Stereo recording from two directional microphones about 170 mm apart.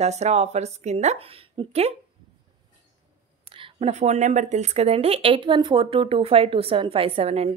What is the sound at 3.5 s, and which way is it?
Speech, 35° right (ahead or behind).